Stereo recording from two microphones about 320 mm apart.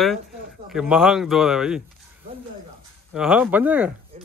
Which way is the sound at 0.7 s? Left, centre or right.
Centre.